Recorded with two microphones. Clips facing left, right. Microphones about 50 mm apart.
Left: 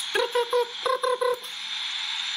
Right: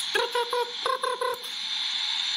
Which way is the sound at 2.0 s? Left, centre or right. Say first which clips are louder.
Right 1 dB; centre.